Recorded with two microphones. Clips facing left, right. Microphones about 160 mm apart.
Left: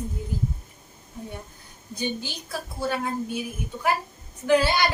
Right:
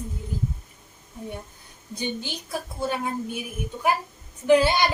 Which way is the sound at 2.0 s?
20° right (ahead or behind).